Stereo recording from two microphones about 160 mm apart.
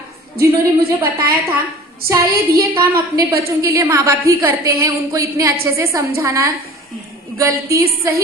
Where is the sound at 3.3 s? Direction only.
15° right (ahead or behind).